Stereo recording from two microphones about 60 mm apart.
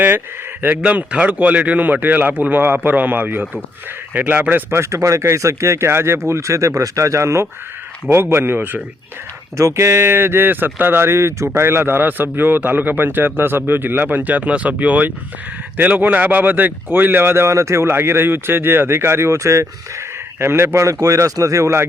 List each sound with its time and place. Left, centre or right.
0.6 s a man's voice: right
4.7 s speech: right
5.9 s speech: right
8.1 s a man's voice: right
9.6 s a man's voice: right
21.0 s speech: right